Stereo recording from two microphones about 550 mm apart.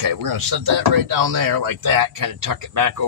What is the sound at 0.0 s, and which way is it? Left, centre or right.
Speech, right.